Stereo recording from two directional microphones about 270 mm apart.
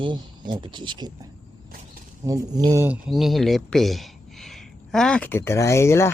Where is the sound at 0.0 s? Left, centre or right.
Centre.